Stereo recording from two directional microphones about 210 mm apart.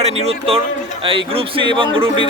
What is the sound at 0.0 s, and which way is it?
A man's voice, 30° right (ahead or behind).